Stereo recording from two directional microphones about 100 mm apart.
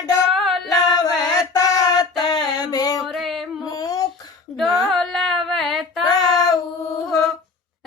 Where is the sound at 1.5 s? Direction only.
40° left (ahead or behind).